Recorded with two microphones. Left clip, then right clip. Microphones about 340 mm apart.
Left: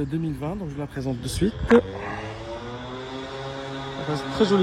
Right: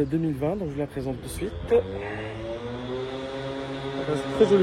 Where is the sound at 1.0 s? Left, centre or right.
Left.